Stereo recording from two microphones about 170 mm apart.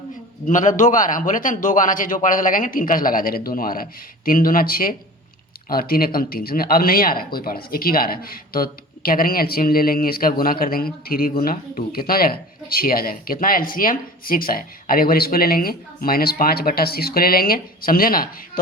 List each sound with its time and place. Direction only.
0.4 s a man's voice: 50° left (ahead or behind)